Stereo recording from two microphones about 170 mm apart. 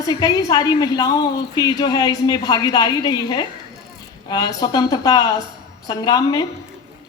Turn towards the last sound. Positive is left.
turn(degrees=25)  # may be behind; listen again after turning